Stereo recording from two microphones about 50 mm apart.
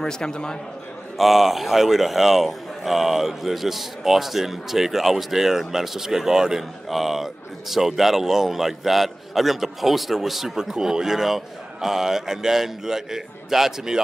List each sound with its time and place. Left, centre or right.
0.0 s a man's voice: centre
1.1 s speech: centre